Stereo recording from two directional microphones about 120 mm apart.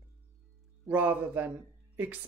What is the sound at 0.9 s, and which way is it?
Speech, 15° right (ahead or behind).